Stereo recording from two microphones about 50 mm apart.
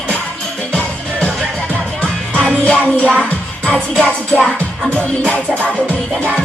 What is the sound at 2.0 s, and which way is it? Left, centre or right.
Music, left.